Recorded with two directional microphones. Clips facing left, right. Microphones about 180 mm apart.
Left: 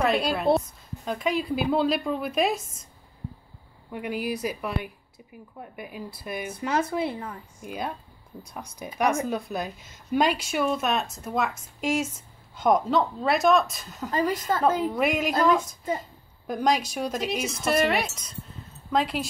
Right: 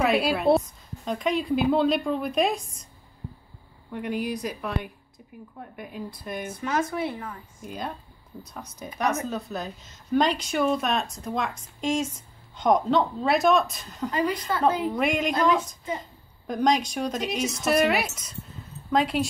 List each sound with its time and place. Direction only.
0.0 s a woman's voice: 5° right (ahead or behind)
3.9 s a woman's voice: 5° left (ahead or behind)
6.7 s speech: 30° left (ahead or behind)
7.6 s a woman's voice: 10° left (ahead or behind)
14.1 s a woman's voice: 45° left (ahead or behind)
14.8 s a woman's voice: centre (ahead or behind)